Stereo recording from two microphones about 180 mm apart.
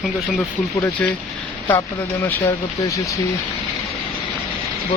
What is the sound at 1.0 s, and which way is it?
Speech, 10° left (ahead or behind).